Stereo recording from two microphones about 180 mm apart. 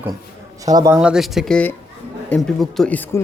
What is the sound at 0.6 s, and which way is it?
Speech, 20° right (ahead or behind).